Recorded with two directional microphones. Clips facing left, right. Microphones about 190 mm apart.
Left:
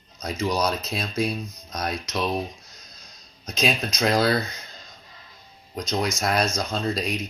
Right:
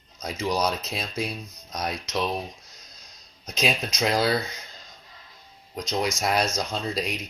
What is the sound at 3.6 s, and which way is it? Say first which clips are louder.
Speech: left 2 dB; 10° right (ahead or behind).